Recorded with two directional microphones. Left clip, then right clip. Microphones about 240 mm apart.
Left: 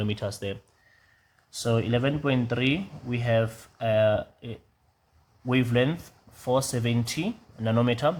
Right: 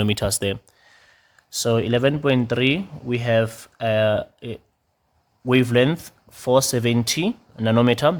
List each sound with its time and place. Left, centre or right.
0.0 s speech: right
1.5 s speech: right